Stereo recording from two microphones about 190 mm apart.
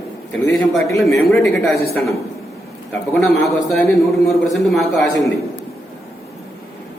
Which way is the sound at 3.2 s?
Centre (ahead or behind).